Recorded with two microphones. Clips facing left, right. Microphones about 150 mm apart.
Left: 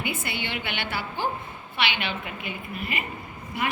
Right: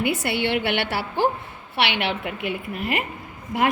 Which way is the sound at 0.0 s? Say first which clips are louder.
Right 8 dB; 70° right (ahead or behind).